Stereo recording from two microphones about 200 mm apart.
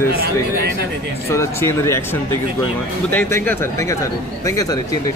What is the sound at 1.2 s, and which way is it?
Speech, 10° left (ahead or behind).